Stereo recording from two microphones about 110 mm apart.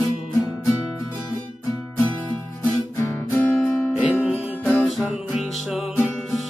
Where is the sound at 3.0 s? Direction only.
20° left (ahead or behind).